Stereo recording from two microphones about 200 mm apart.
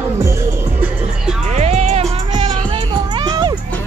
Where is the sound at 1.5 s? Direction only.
35° right (ahead or behind).